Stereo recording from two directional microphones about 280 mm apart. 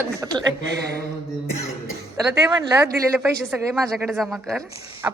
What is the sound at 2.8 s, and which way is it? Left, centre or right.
Speech, centre.